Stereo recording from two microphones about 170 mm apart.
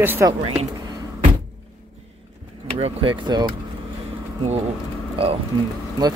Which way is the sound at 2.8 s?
30° right (ahead or behind).